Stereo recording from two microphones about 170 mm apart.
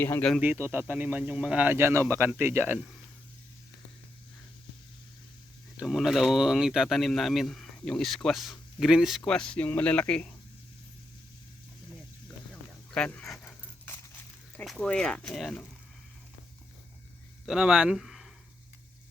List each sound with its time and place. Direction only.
0.0 s speech: 10° left (ahead or behind)
0.4 s speech: 10° right (ahead or behind)
5.7 s speech: 5° right (ahead or behind)
12.9 s dog: 5° left (ahead or behind)
14.5 s speech: centre (ahead or behind)
17.4 s speech: 5° right (ahead or behind)